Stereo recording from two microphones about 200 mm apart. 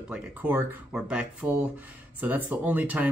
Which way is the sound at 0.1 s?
10° right (ahead or behind).